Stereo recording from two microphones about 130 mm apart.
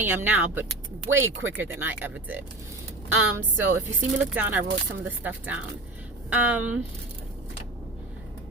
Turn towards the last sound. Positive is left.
turn(degrees=-10)  # may be behind; listen again after turning